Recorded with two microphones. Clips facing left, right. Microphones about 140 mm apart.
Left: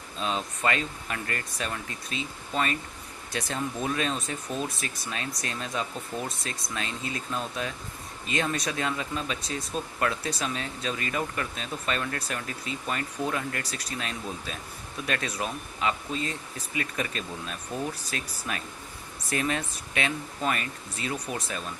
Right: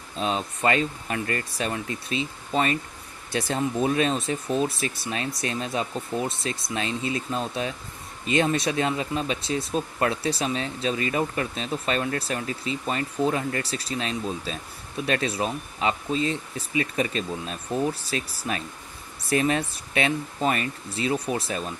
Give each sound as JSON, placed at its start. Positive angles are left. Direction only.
{"t": 0.2, "sound": "speech", "side_deg": -35}